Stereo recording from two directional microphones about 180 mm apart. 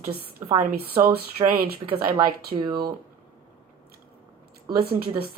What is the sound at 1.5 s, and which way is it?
Speech, 55° right (ahead or behind).